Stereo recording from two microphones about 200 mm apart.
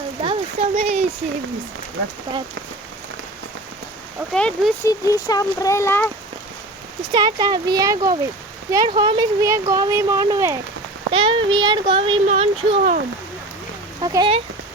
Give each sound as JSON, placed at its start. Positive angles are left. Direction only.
{"t": 0.2, "sound": "a sound", "side_deg": -30}
{"t": 4.3, "sound": "speech", "side_deg": 5}
{"t": 4.9, "sound": "speech", "side_deg": 20}
{"t": 7.0, "sound": "speech", "side_deg": -20}
{"t": 11.1, "sound": "speech", "side_deg": -25}
{"t": 12.3, "sound": "speech", "side_deg": -40}
{"t": 14.0, "sound": "speech", "side_deg": -20}